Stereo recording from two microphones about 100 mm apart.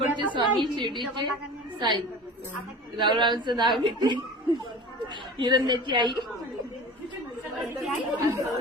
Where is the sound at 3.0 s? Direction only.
50° right (ahead or behind).